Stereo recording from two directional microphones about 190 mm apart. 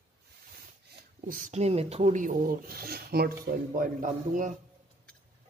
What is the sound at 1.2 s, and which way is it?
Speech, 45° right (ahead or behind).